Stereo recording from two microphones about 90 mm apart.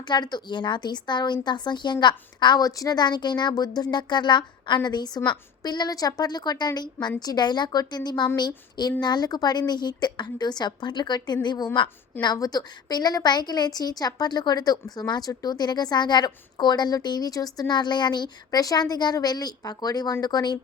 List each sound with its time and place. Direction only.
0.0 s a woman's voice: 55° left (ahead or behind)